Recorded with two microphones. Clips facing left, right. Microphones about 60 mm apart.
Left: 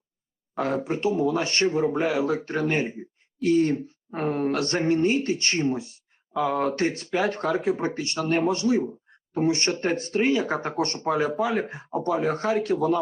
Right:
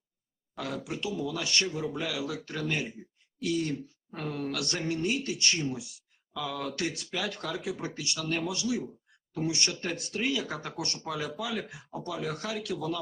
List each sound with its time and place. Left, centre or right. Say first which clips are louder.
0.5 s speech: left 10 dB; left